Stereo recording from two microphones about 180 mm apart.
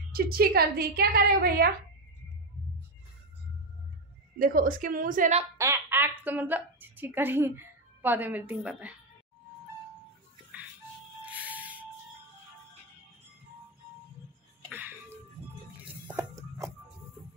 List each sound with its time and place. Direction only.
0.1 s a woman's voice: 55° right (ahead or behind)
4.4 s a woman's voice: 50° right (ahead or behind)
5.6 s a woman's voice: 10° right (ahead or behind)
11.2 s music: 10° right (ahead or behind)
14.7 s music: 10° right (ahead or behind)